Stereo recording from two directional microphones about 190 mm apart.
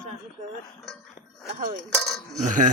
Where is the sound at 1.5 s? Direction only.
45° right (ahead or behind).